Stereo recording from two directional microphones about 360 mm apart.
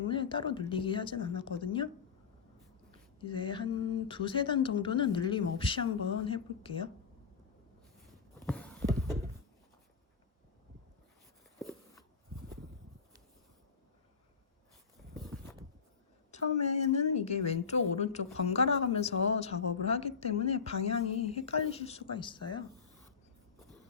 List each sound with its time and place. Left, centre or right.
0.1 s speech: centre
3.2 s speech: centre
8.4 s a sound: centre
16.3 s speech: centre
20.2 s speech: left
21.1 s speech: centre